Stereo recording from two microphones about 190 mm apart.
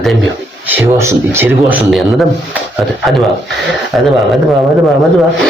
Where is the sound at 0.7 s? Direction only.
10° right (ahead or behind).